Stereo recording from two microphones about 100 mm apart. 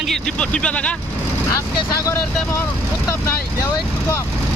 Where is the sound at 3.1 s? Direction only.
35° left (ahead or behind).